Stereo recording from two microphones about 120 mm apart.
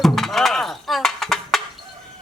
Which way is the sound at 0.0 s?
Centre (ahead or behind).